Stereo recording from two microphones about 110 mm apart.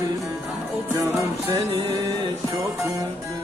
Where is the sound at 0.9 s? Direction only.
35° right (ahead or behind).